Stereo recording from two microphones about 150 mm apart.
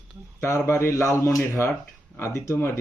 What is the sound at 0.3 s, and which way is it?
Speech, 20° left (ahead or behind).